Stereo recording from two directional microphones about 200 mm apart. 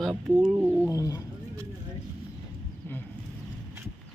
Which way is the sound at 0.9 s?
15° left (ahead or behind).